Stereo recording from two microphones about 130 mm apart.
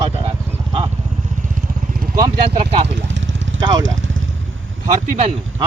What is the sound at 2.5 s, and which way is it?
Speech, 45° right (ahead or behind).